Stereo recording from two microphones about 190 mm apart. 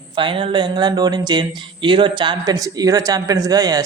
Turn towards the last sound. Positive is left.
turn(degrees=-20)  # may be behind; listen again after turning